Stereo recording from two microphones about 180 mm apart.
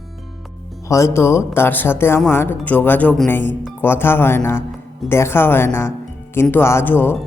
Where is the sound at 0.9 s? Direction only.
15° left (ahead or behind).